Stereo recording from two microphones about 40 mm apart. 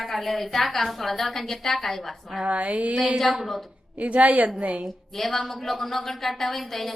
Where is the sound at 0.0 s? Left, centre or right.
Centre.